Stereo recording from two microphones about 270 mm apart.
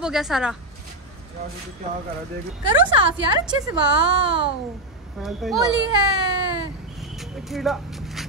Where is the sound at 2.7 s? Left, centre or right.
Centre.